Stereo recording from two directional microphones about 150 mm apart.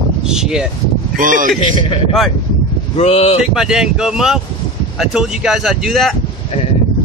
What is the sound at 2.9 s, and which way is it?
Speech, 40° left (ahead or behind).